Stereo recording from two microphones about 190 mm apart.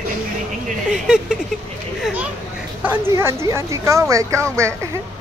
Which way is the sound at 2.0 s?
5° right (ahead or behind).